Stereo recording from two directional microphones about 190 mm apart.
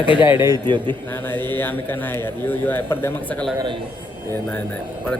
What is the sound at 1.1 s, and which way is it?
A man's voice, 10° left (ahead or behind).